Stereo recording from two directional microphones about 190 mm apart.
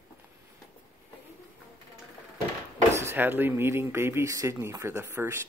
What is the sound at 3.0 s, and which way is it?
Speech, 10° right (ahead or behind).